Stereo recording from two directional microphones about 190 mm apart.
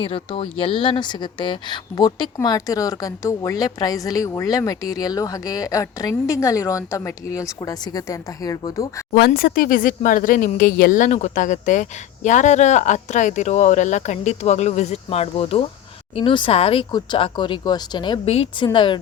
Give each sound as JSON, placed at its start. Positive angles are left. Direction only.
{"t": 0.0, "sound": "speech", "side_deg": 30}
{"t": 9.1, "sound": "speech", "side_deg": 55}